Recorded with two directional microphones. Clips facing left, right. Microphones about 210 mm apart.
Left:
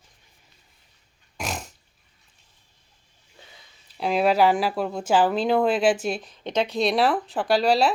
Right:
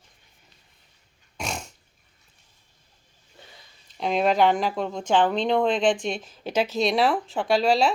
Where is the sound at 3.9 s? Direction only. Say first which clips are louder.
Left 1 dB; 5° left (ahead or behind).